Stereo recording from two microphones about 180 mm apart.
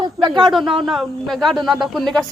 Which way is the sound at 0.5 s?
Centre (ahead or behind).